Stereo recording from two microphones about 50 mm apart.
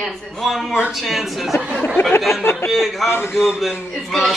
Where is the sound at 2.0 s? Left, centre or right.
Left.